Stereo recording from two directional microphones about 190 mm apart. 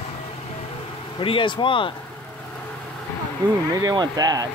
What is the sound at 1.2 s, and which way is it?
Speech, 25° left (ahead or behind).